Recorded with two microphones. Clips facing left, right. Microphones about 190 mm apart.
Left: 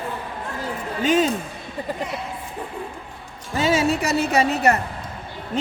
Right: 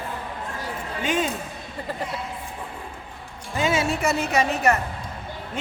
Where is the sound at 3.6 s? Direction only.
35° left (ahead or behind).